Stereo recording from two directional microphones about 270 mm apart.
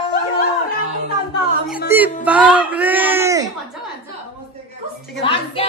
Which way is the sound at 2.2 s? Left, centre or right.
Centre.